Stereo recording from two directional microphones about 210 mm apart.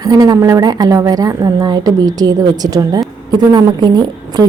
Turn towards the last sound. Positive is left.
turn(degrees=-20)  # may be behind; listen again after turning